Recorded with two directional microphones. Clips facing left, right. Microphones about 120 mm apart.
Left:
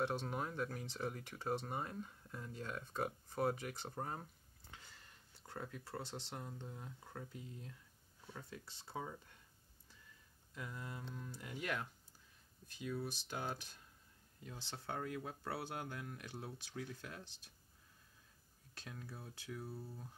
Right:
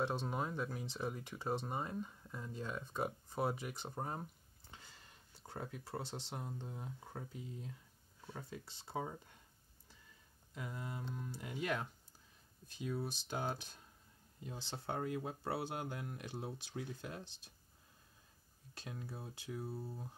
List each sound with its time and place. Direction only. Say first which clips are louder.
0.0 s speech: right 1 dB; 20° right (ahead or behind)
4.9 s a sound: right 1 dB; 20° right (ahead or behind)
6.3 s speech: right 3 dB; 20° right (ahead or behind)
10.5 s speech: right 3 dB; 20° right (ahead or behind)
18.8 s speech: right 4 dB; 20° right (ahead or behind)